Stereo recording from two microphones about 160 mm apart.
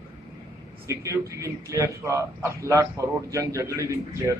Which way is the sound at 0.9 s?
20° right (ahead or behind).